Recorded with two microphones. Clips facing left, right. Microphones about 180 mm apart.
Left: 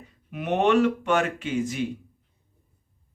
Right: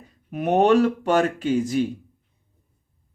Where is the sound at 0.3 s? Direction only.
40° right (ahead or behind).